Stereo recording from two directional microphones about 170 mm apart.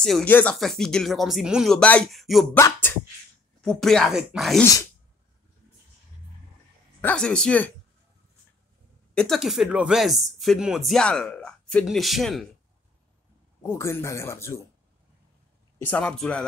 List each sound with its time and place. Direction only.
0.0 s speech: 5° left (ahead or behind)
2.5 s speech: 10° left (ahead or behind)
7.0 s speech: 5° left (ahead or behind)
9.1 s speech: 5° left (ahead or behind)
13.6 s speech: 15° left (ahead or behind)
15.8 s speech: 10° left (ahead or behind)